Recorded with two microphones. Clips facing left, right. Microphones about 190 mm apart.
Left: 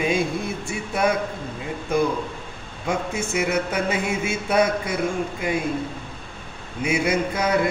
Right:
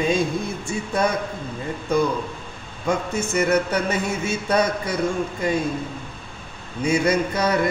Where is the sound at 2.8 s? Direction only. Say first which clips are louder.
Right 2 dB; 10° left (ahead or behind).